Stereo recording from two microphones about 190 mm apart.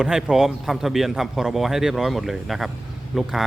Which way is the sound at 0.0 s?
5° right (ahead or behind).